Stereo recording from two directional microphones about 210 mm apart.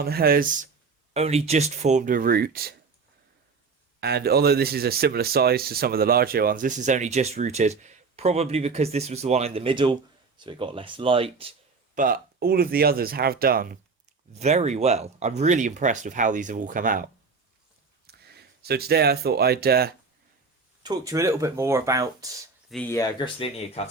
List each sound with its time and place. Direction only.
0.0 s speech: 45° right (ahead or behind)
1.1 s speech: 30° right (ahead or behind); by 2.7 s 45° right (ahead or behind)
4.0 s speech: 50° right (ahead or behind); by 11.5 s 25° right (ahead or behind)
11.9 s speech: 40° right (ahead or behind)
14.3 s speech: 30° right (ahead or behind); by 19.9 s 45° right (ahead or behind)
20.8 s speech: 15° right (ahead or behind)
22.7 s speech: 10° left (ahead or behind); by 23.9 s 30° left (ahead or behind)